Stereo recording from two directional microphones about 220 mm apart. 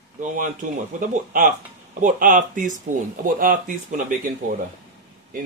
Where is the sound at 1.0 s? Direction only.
40° right (ahead or behind).